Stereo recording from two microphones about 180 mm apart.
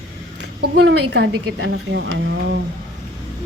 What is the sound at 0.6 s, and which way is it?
Speech, 70° right (ahead or behind).